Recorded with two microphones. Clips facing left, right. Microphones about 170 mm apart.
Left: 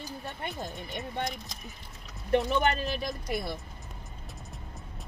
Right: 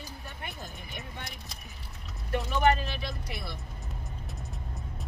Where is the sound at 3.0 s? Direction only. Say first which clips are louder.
Left 5 dB; 40° left (ahead or behind).